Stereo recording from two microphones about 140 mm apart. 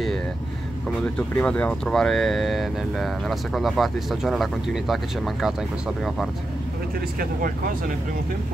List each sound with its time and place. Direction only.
0.8 s speech: 5° left (ahead or behind)